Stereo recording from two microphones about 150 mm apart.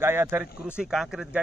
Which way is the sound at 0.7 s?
5° right (ahead or behind).